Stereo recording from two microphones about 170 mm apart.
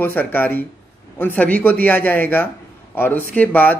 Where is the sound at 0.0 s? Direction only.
10° left (ahead or behind).